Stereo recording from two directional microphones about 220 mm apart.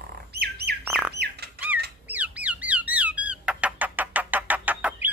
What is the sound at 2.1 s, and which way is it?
Bird, 5° right (ahead or behind).